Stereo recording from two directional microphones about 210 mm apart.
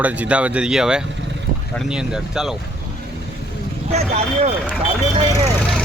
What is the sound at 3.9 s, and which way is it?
Speech, 30° right (ahead or behind).